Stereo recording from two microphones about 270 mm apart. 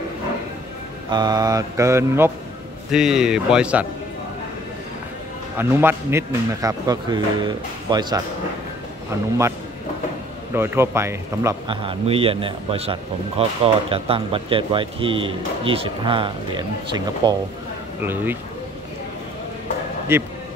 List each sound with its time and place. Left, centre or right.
1.1 s a man's voice: centre
5.6 s a man's voice: centre
10.5 s a man's voice: centre
20.1 s a man's voice: centre